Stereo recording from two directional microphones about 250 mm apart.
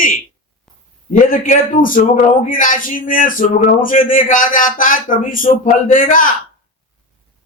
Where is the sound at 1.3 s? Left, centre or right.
Left.